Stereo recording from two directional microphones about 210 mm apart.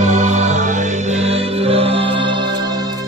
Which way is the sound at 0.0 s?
35° right (ahead or behind).